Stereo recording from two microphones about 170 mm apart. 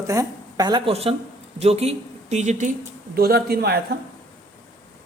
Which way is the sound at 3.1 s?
65° right (ahead or behind).